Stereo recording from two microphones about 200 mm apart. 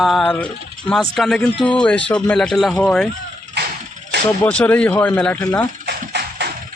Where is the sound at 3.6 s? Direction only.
55° right (ahead or behind).